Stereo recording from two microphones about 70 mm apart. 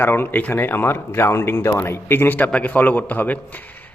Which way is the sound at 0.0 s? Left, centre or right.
Left.